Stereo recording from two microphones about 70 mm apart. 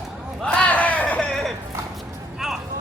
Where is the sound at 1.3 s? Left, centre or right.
Centre.